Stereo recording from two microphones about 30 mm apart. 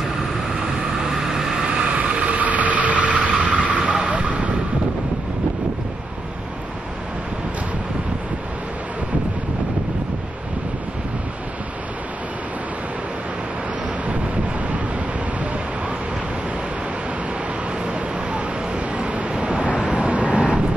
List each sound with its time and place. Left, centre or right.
1.1 s vehicle: centre
2.0 s vehicle: right
2.4 s vehicle: right
17.8 s vehicle: right